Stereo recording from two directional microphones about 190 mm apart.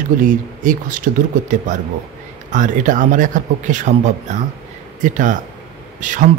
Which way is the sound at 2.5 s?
45° right (ahead or behind).